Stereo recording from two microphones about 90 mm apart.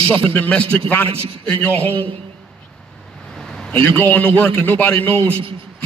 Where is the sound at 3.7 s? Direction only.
20° left (ahead or behind).